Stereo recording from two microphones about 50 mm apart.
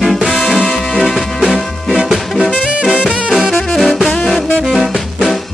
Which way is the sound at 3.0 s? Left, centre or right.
Right.